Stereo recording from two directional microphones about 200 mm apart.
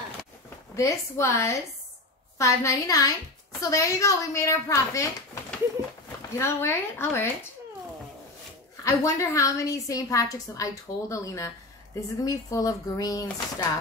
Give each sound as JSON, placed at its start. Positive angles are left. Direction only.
{"t": 0.7, "sound": "a woman's voice", "side_deg": 15}
{"t": 8.8, "sound": "a woman's voice", "side_deg": 15}